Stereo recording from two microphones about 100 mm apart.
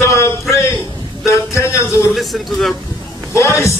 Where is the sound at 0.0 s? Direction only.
30° left (ahead or behind).